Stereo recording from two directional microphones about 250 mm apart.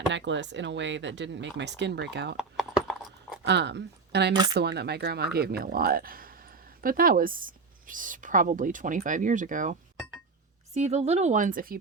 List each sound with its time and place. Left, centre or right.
0.1 s speech: right
2.3 s clip-clop: centre
3.4 s a woman's voice: right
10.8 s speech: right